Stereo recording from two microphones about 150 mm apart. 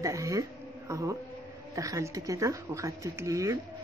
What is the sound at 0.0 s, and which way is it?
Speech, 20° right (ahead or behind).